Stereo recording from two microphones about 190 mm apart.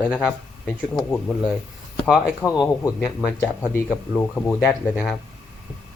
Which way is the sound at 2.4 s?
15° left (ahead or behind).